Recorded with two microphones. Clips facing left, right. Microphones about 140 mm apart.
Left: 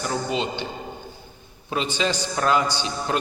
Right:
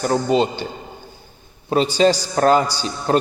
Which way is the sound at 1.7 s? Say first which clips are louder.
Right 9 dB; 40° right (ahead or behind).